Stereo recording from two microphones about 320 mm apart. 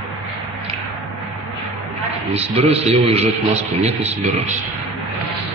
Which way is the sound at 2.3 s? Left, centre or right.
Centre.